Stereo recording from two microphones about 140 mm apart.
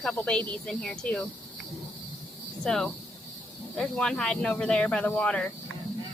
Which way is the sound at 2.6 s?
5° left (ahead or behind).